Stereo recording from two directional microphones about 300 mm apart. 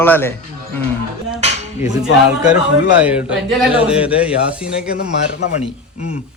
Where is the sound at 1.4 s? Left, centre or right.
Right.